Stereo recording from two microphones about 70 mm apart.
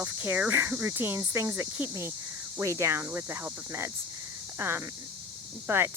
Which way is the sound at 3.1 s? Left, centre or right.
Right.